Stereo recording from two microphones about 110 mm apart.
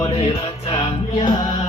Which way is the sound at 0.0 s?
60° left (ahead or behind).